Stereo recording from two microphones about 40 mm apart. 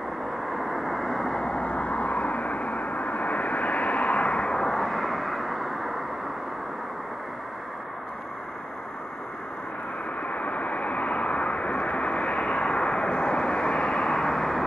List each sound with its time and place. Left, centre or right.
0.5 s vehicle: centre; by 4.6 s left
4.6 s vehicle: centre
10.2 s vehicle: left; by 14.6 s centre